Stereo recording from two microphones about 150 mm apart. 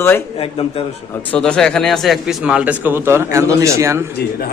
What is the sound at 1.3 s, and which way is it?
Speech, 5° left (ahead or behind).